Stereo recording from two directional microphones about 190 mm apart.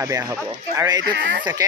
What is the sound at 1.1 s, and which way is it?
Speech, 70° right (ahead or behind).